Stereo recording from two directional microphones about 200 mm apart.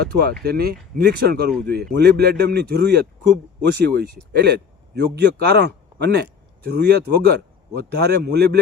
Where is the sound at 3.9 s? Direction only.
50° right (ahead or behind).